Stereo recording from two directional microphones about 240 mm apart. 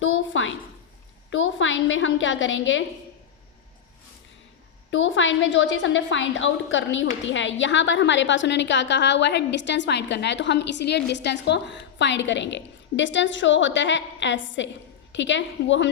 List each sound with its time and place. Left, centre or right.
0.0 s a sound: left
1.3 s a woman's voice: left
4.9 s a woman's voice: left